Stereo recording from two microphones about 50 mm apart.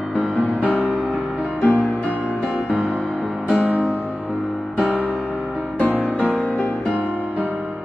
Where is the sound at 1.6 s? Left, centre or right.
Left.